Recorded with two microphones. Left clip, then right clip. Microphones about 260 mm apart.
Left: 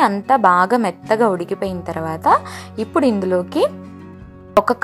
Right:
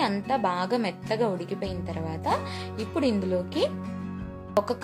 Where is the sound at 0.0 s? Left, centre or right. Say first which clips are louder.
Left 12 dB; left.